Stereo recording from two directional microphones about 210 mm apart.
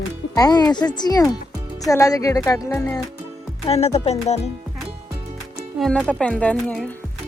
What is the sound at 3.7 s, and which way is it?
Speech, 30° left (ahead or behind).